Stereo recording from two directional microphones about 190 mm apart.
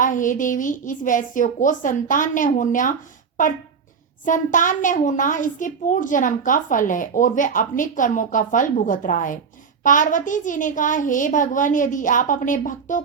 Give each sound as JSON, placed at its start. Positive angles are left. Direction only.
{"t": 0.0, "sound": "a woman's voice", "side_deg": 45}